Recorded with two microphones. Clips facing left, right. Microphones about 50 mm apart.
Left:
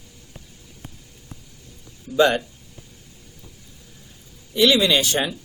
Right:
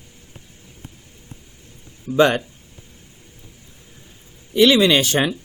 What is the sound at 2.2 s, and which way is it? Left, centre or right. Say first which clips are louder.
Speech: right 2 dB; right.